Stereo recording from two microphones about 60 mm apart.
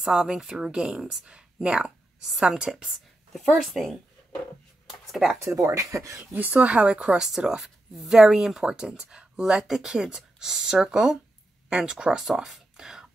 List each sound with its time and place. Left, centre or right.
0.0 s a woman's voice: centre
5.8 s speech: right
6.3 s a woman's voice: right; by 13.1 s centre